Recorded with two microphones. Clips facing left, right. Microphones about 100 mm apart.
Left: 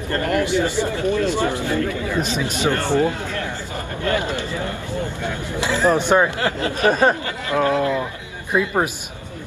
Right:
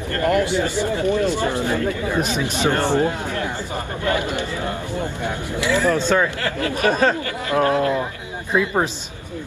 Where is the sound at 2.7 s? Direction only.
20° right (ahead or behind).